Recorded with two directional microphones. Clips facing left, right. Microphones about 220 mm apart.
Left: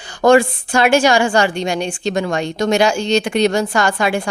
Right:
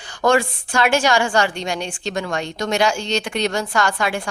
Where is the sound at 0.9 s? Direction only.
10° left (ahead or behind).